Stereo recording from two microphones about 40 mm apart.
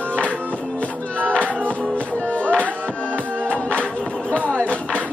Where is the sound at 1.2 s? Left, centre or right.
Left.